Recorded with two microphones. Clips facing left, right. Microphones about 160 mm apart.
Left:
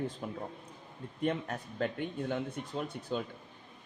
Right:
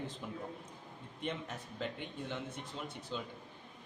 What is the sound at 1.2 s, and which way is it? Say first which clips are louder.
Speech: left 8 dB; 50° left (ahead or behind).